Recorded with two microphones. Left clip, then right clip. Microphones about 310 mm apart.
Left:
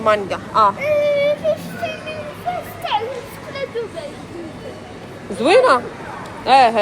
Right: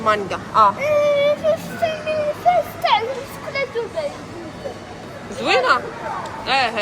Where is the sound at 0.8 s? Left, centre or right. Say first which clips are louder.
Even; right.